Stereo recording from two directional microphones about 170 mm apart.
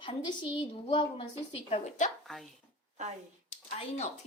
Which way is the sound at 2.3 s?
Centre (ahead or behind).